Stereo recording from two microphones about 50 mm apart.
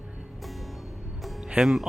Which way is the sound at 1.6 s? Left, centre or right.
Centre.